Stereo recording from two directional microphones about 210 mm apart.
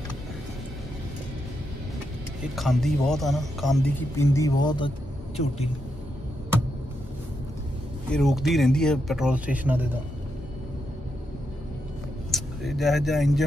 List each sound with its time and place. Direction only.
2.5 s speech: centre (ahead or behind)
4.2 s speech: 15° left (ahead or behind)
8.1 s speech: centre (ahead or behind)
12.3 s speech: centre (ahead or behind)